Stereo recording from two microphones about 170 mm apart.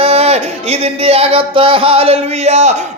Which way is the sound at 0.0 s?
35° right (ahead or behind).